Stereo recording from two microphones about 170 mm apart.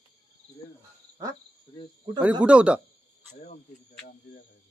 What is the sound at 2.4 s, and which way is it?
Speech, 5° right (ahead or behind).